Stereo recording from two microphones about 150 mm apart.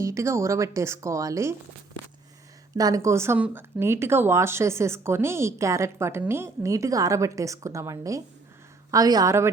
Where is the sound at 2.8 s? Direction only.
25° right (ahead or behind).